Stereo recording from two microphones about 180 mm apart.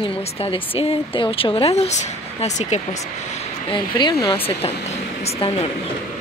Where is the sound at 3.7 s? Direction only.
25° left (ahead or behind).